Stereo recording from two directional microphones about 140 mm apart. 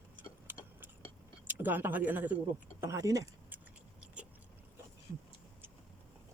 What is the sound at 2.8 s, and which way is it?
Speech, 25° right (ahead or behind).